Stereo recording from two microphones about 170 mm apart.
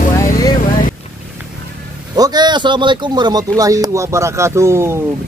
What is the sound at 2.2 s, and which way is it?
Speech, 25° right (ahead or behind).